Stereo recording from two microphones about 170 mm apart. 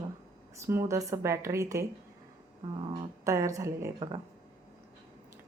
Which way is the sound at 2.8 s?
30° right (ahead or behind).